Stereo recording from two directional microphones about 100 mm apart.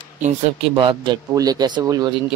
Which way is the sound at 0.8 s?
55° right (ahead or behind).